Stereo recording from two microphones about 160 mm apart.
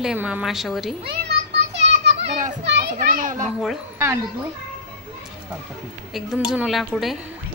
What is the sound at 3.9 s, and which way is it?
Speech, 15° right (ahead or behind).